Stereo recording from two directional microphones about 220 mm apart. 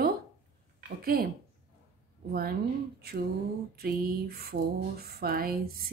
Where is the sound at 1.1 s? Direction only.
45° right (ahead or behind).